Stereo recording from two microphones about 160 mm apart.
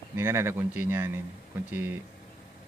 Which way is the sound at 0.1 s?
15° right (ahead or behind).